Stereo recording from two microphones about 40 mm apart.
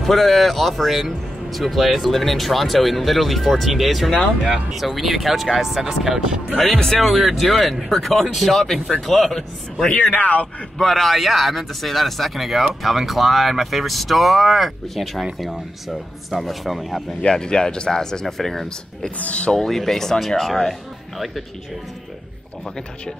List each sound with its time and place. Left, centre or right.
0.0 s speech: centre
6.6 s speech: centre
10.1 s a man's voice: left
10.8 s speech: centre
17.2 s speech: centre
18.2 s speech: centre
19.1 s a man's voice: left
19.5 s speech: centre